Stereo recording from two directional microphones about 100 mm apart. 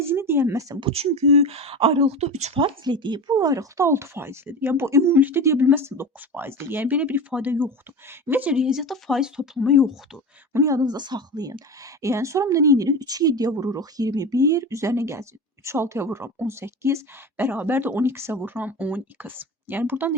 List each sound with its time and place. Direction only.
0.0 s speech: 25° right (ahead or behind)
0.8 s speech: 70° right (ahead or behind)
2.8 s a woman's voice: 50° right (ahead or behind); by 9.9 s centre (ahead or behind)
10.5 s speech: 35° right (ahead or behind)
12.0 s a woman's voice: 30° right (ahead or behind)